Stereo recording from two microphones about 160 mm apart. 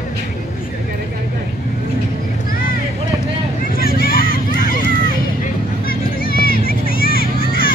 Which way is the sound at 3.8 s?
65° left (ahead or behind).